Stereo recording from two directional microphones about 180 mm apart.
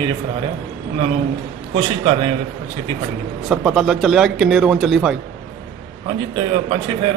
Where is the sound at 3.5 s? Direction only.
5° right (ahead or behind).